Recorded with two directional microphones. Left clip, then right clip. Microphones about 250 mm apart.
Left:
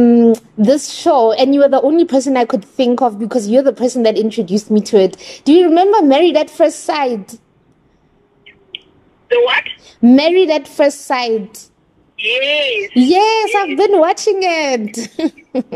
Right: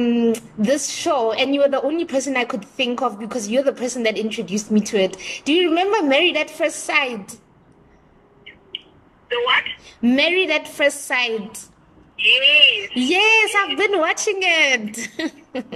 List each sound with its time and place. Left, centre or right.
0.0 s a woman's voice: centre
9.3 s a woman's voice: left
9.8 s a woman's voice: left
13.0 s a woman's voice: left